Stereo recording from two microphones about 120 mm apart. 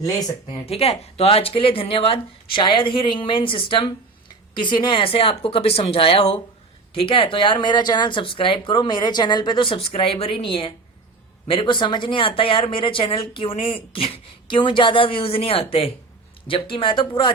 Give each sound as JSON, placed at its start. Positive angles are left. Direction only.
{"t": 0.6, "sound": "speech", "side_deg": 55}